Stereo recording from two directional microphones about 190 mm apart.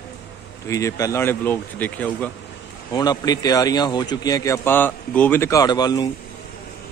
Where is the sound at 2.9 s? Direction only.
20° left (ahead or behind).